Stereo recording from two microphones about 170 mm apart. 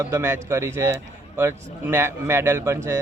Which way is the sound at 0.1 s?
15° right (ahead or behind).